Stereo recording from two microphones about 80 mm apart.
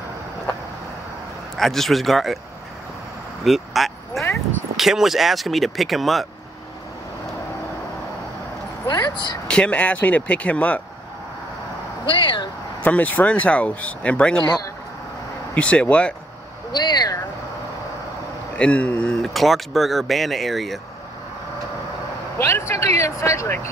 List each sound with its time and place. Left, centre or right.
1.6 s speech: centre
3.4 s speech: centre
8.8 s speech: left
9.5 s speech: centre
12.1 s speech: left
12.8 s speech: centre
15.5 s speech: centre
16.7 s speech: left
18.6 s speech: centre
19.2 s speech: centre
22.4 s speech: left